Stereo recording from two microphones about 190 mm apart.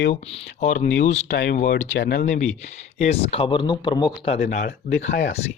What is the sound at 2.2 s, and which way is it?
Speech, 40° left (ahead or behind).